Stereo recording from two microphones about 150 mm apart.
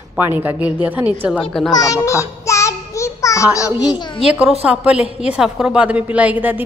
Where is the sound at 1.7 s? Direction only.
25° left (ahead or behind).